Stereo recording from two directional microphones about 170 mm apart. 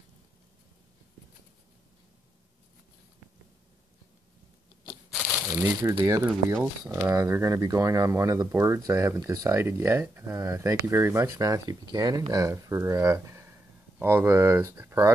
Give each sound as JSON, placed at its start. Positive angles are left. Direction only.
{"t": 5.5, "sound": "speech", "side_deg": -15}